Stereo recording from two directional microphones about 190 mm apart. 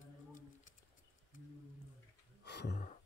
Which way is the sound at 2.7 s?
40° left (ahead or behind).